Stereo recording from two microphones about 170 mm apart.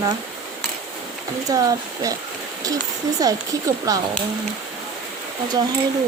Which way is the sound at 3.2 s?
20° right (ahead or behind).